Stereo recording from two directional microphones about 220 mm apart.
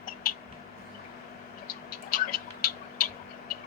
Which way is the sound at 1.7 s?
40° left (ahead or behind).